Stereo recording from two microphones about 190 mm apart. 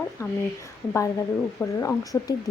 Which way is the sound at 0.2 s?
15° left (ahead or behind).